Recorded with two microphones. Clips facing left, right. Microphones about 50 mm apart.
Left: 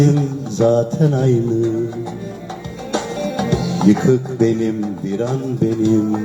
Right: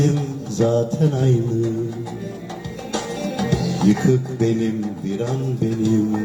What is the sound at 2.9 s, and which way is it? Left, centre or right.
Music, left.